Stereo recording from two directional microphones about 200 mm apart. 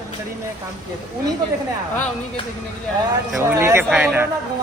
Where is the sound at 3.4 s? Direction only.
10° right (ahead or behind).